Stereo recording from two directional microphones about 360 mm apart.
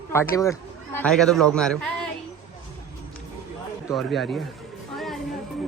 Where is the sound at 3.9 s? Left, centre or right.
Centre.